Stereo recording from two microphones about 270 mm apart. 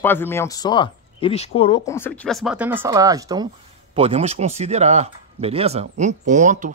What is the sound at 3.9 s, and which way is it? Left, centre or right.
Speech, right.